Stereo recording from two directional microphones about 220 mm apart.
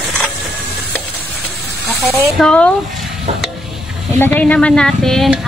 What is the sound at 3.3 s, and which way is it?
Stir, 30° right (ahead or behind).